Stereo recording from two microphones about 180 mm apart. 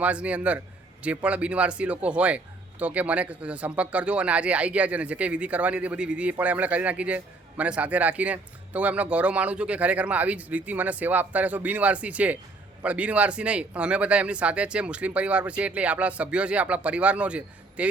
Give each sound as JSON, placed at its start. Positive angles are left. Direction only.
{"t": 0.0, "sound": "speech", "side_deg": -5}